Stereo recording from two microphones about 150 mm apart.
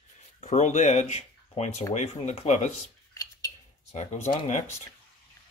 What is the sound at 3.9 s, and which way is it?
Speech, 50° left (ahead or behind).